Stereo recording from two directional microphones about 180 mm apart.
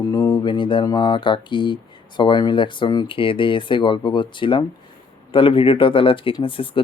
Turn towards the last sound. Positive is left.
turn(degrees=30)  # may be behind; listen again after turning